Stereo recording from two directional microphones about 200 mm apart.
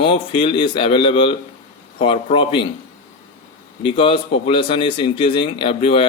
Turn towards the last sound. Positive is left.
turn(degrees=25)  # may be behind; listen again after turning